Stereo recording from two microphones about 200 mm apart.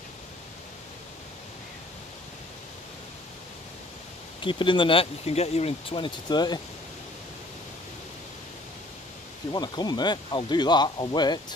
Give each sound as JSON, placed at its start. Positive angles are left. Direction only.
{"t": 4.4, "sound": "speech", "side_deg": 25}
{"t": 9.5, "sound": "speech", "side_deg": 20}